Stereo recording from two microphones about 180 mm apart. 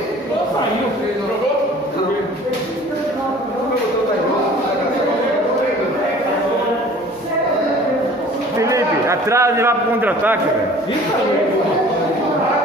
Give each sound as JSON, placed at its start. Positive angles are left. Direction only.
{"t": 8.5, "sound": "a man's voice", "side_deg": -15}